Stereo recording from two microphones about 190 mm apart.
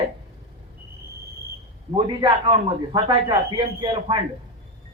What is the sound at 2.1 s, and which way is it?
A man's voice, 25° right (ahead or behind).